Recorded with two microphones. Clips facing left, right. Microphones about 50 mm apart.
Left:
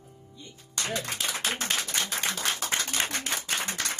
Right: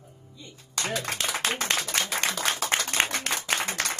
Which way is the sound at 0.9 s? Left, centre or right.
Right.